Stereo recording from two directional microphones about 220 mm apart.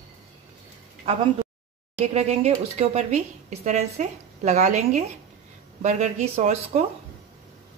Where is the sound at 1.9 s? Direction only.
30° right (ahead or behind).